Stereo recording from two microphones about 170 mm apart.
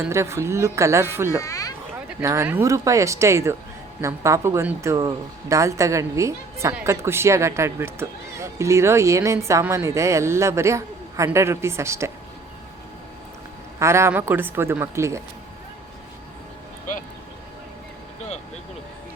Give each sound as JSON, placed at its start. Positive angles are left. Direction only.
{"t": 0.0, "sound": "speech", "side_deg": -15}
{"t": 1.4, "sound": "a sound", "side_deg": 20}
{"t": 2.2, "sound": "speech", "side_deg": -15}
{"t": 13.7, "sound": "speech", "side_deg": -15}